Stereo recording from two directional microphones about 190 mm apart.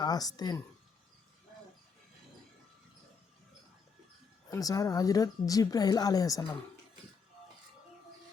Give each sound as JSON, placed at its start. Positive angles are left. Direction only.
{"t": 0.0, "sound": "speech", "side_deg": 20}
{"t": 4.4, "sound": "speech", "side_deg": 20}